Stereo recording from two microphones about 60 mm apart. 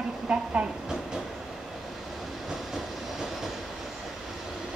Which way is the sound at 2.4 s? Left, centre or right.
Centre.